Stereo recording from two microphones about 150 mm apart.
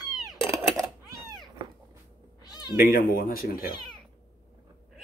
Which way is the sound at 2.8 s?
75° left (ahead or behind).